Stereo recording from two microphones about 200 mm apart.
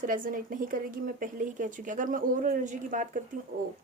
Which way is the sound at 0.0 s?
45° right (ahead or behind).